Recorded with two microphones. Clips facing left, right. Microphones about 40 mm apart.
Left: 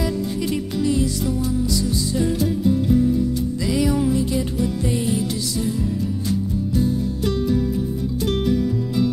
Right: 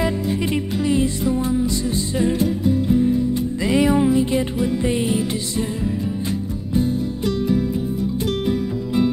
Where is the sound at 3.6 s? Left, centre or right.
Right.